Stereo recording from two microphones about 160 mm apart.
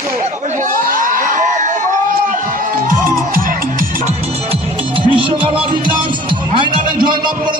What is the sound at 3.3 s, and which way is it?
Music, 60° right (ahead or behind).